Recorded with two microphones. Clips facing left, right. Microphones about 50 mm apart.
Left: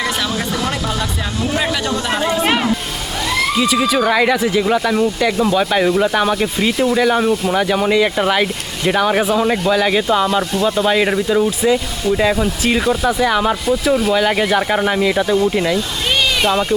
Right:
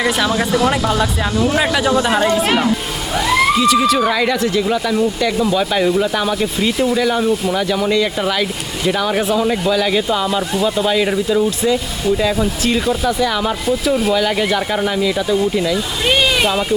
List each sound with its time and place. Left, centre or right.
0.3 s speech: centre
2.2 s speech: centre
3.2 s a sound: centre
3.6 s speech: centre
10.5 s speech: centre
10.8 s speech: centre
13.7 s speech: centre
14.2 s speech: centre
16.4 s speech: centre